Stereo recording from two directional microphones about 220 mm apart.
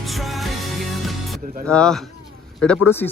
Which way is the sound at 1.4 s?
40° right (ahead or behind).